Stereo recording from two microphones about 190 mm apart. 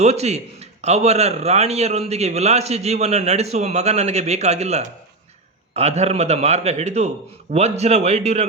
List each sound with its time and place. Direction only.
0.0 s a man's voice: 35° right (ahead or behind)